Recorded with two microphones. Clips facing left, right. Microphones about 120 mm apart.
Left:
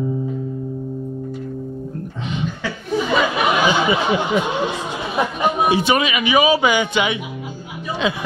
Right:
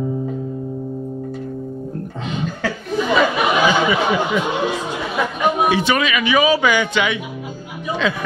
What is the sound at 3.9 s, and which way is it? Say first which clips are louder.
Speech: even; 25° left (ahead or behind).